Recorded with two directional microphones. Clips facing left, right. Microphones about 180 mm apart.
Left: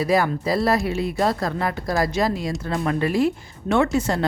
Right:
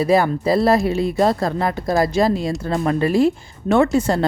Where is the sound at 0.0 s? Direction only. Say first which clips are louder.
Right 4 dB; 30° right (ahead or behind).